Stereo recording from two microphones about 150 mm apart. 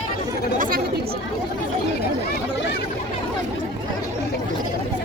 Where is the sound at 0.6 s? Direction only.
75° right (ahead or behind).